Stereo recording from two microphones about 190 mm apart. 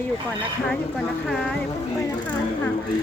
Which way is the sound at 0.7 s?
Centre (ahead or behind).